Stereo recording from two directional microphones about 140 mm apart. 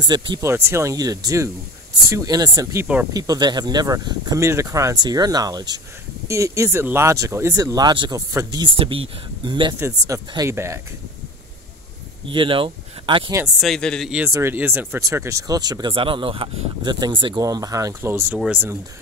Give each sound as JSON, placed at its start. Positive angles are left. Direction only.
{"t": 0.4, "sound": "speech", "side_deg": -20}
{"t": 8.7, "sound": "speech", "side_deg": -40}
{"t": 9.8, "sound": "speech", "side_deg": -20}
{"t": 12.3, "sound": "speech", "side_deg": -40}
{"t": 13.6, "sound": "a man's voice", "side_deg": 5}
{"t": 14.3, "sound": "speech", "side_deg": -15}